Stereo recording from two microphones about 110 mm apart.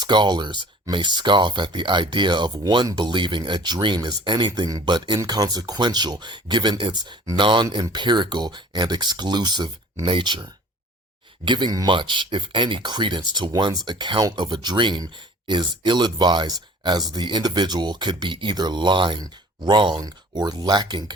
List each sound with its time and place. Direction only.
0.0 s speech: 40° right (ahead or behind)
11.4 s speech: 45° right (ahead or behind)